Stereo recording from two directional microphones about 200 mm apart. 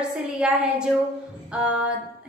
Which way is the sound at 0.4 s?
5° right (ahead or behind).